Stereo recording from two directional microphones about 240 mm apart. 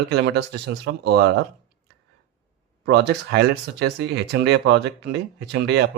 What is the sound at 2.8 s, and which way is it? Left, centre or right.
Speech, right.